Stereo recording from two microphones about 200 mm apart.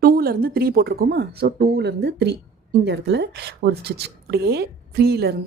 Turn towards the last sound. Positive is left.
turn(degrees=-50)  # may be behind; listen again after turning